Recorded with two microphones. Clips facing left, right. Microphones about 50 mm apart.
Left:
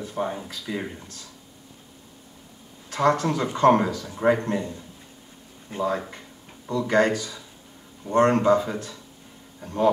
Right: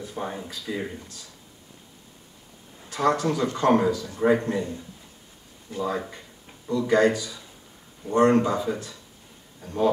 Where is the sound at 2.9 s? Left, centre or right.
Left.